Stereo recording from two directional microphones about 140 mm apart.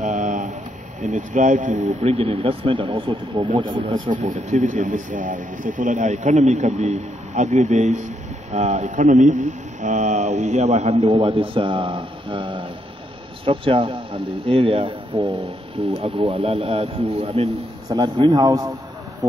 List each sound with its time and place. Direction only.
0.0 s a sound: 60° right (ahead or behind)
1.1 s speech: 65° right (ahead or behind)
1.8 s speech: 50° right (ahead or behind)
4.1 s speech: 65° right (ahead or behind)
11.1 s a man's voice: 35° right (ahead or behind)
17.8 s a man's voice: 30° right (ahead or behind)